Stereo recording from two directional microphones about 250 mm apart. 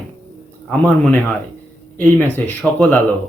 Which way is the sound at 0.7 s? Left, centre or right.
Centre.